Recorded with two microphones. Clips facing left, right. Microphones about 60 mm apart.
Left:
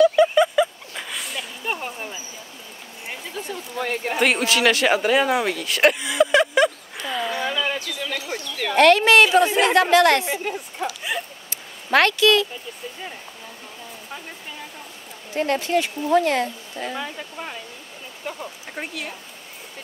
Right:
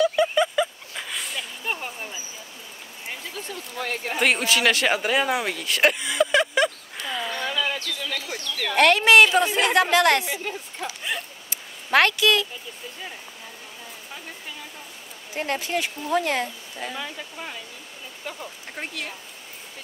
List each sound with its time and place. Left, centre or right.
0.0 s a sound: centre
3.1 s speech: centre
8.7 s speech: centre
9.2 s speech: centre
9.8 s speech: centre
10.4 s a sound: centre
11.5 s a sound: centre
15.3 s speech: centre
16.0 s speech: centre